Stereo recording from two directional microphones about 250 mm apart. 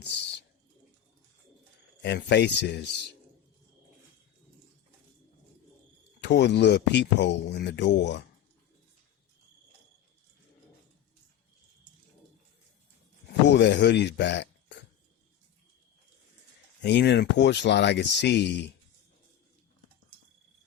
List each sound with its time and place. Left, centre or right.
2.0 s speech: left
6.2 s speech: left
13.5 s speech: left
16.8 s speech: left